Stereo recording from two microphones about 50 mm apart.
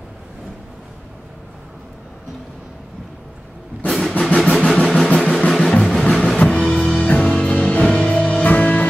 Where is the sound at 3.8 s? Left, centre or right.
Centre.